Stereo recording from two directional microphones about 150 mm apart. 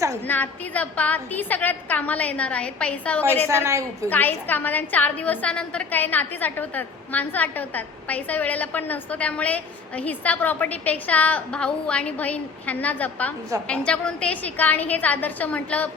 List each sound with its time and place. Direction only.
0.3 s a woman's voice: 10° left (ahead or behind)
3.5 s a woman's voice: 20° right (ahead or behind)
4.1 s a woman's voice: 10° left (ahead or behind)